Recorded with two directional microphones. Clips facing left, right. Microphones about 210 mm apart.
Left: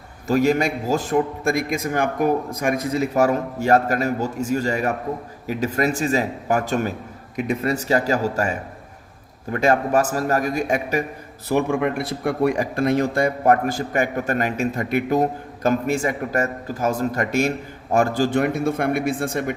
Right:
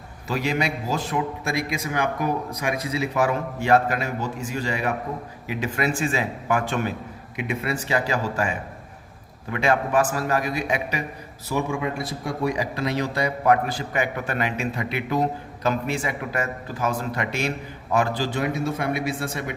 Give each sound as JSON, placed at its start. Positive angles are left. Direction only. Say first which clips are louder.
{"t": 0.3, "sound": "a man's voice", "louder": "left 7 dB", "side_deg": 45}
{"t": 11.4, "sound": "speech", "louder": "left 5 dB", "side_deg": 60}